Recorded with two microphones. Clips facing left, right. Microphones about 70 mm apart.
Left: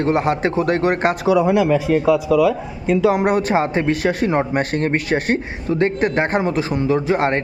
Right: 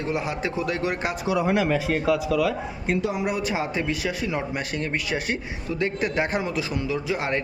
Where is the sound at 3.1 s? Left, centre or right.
Left.